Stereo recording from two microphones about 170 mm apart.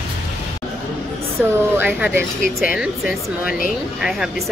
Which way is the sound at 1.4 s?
10° right (ahead or behind).